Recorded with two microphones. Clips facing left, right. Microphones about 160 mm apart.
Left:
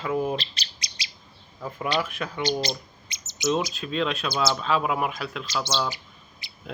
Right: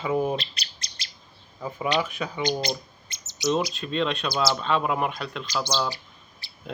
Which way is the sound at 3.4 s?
Centre (ahead or behind).